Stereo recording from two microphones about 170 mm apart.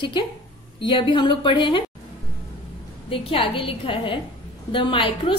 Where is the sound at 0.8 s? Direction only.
30° left (ahead or behind).